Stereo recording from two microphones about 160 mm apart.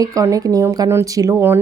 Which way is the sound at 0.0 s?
20° right (ahead or behind).